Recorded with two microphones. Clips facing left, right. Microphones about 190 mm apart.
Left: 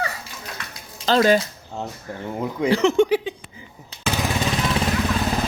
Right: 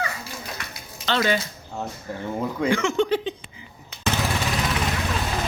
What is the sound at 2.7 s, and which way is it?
Speech, 30° left (ahead or behind).